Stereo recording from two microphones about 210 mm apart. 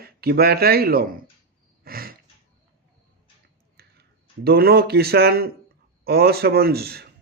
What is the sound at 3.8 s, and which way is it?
Clicking, 50° right (ahead or behind).